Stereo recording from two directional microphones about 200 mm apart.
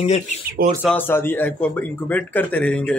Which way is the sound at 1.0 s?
10° left (ahead or behind).